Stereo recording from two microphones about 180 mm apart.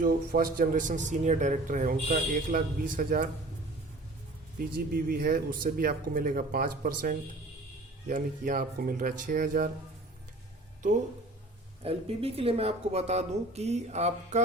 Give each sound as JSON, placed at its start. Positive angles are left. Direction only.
{"t": 0.0, "sound": "a man's voice", "side_deg": -55}
{"t": 5.0, "sound": "a man's voice", "side_deg": -55}
{"t": 11.8, "sound": "speech", "side_deg": -30}